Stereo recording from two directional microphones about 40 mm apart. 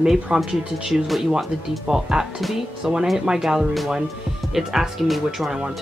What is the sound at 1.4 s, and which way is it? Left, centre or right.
Speech, centre.